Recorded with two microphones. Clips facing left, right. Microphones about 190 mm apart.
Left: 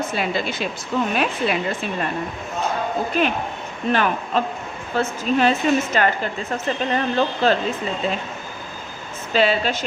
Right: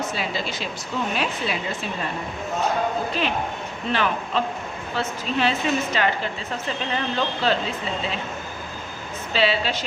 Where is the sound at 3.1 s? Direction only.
50° left (ahead or behind).